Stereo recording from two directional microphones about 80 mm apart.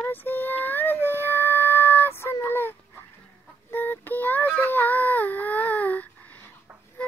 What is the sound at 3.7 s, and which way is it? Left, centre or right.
Child singing, left.